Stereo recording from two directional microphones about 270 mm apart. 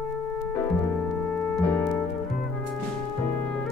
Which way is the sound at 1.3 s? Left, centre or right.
Centre.